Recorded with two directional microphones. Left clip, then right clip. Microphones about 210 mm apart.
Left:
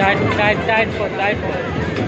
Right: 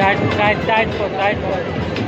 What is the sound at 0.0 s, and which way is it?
Speech, 5° left (ahead or behind).